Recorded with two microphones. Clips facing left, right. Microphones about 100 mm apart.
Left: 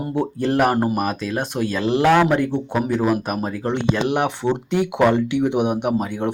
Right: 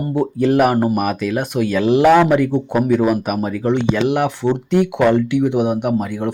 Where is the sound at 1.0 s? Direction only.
25° left (ahead or behind).